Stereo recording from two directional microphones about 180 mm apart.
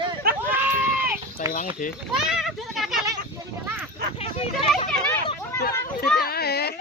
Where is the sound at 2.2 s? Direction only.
5° right (ahead or behind).